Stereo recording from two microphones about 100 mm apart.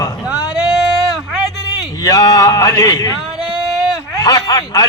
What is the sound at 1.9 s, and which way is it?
Speech, 40° left (ahead or behind).